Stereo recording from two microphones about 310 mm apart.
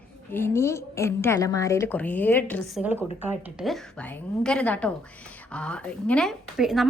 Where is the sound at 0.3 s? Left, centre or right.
Centre.